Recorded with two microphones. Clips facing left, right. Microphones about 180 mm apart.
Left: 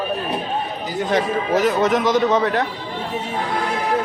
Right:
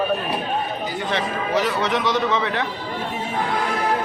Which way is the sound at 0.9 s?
45° left (ahead or behind).